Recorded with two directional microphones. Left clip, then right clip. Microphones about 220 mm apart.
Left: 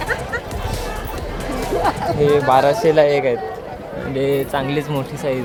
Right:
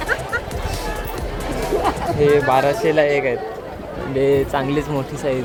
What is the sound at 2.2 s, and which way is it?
Speech, centre (ahead or behind).